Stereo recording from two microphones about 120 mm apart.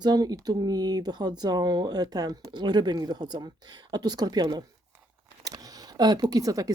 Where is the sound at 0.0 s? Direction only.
35° right (ahead or behind).